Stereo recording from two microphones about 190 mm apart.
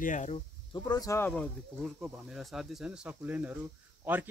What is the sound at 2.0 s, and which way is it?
Speech, centre (ahead or behind).